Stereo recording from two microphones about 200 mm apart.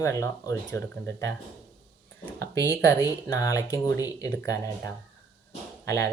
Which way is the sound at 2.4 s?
15° left (ahead or behind).